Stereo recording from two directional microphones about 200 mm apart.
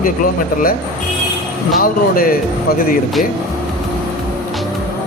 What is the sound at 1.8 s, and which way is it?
Speech, 45° left (ahead or behind).